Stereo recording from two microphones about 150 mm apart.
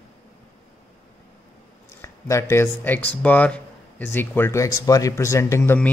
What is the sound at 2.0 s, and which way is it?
Speech, 20° left (ahead or behind).